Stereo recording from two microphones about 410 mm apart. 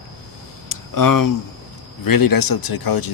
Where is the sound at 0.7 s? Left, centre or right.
Left.